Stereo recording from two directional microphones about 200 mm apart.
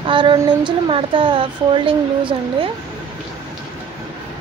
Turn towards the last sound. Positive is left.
turn(degrees=-25)  # may be behind; listen again after turning